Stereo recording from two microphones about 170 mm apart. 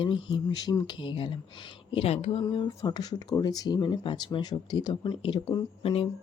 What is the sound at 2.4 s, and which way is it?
Speech, 25° left (ahead or behind).